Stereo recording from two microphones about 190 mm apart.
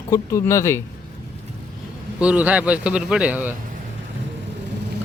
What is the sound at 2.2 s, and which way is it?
A man's voice, 5° right (ahead or behind).